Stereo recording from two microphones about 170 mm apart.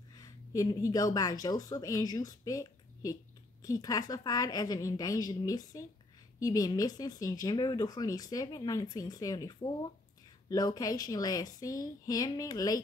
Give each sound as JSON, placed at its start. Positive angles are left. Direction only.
{"t": 0.1, "sound": "speech", "side_deg": 20}